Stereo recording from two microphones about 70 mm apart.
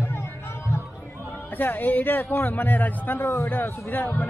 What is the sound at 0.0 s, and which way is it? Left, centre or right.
Music, left.